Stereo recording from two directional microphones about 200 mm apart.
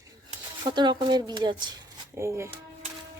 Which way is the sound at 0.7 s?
20° right (ahead or behind).